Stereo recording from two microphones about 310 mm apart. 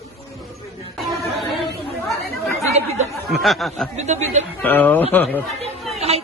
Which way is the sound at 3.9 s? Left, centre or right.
Right.